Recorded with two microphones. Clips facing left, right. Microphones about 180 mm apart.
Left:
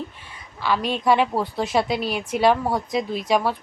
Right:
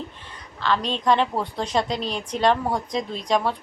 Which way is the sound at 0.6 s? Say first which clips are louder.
Left 1 dB; 10° left (ahead or behind).